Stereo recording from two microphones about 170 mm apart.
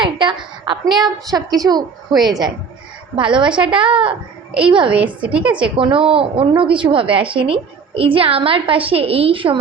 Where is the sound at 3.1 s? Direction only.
30° right (ahead or behind).